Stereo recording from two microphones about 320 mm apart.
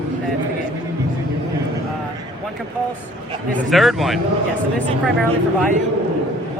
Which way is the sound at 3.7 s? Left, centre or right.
Centre.